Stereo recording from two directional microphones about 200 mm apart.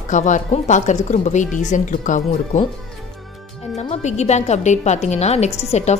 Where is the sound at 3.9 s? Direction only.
35° left (ahead or behind).